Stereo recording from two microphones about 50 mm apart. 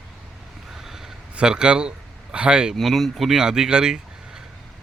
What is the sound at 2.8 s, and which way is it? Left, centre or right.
Speech, centre.